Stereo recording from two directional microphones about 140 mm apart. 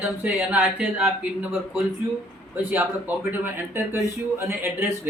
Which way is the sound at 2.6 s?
15° right (ahead or behind).